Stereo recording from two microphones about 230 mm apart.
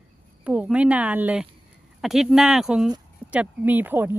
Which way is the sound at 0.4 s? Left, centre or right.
Centre.